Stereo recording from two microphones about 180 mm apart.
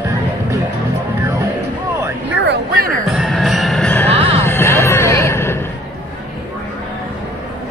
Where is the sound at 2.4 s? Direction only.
55° right (ahead or behind).